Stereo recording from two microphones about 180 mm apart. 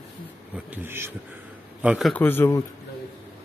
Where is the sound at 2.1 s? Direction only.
10° left (ahead or behind).